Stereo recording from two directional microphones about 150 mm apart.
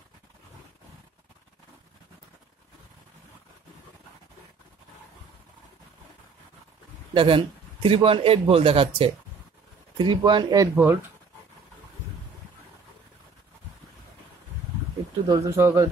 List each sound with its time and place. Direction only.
7.2 s a man's voice: 35° right (ahead or behind)
10.8 s a man's voice: 15° right (ahead or behind)
15.2 s a man's voice: 25° right (ahead or behind)